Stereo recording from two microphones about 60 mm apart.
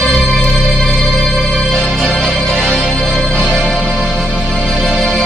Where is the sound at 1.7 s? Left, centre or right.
Centre.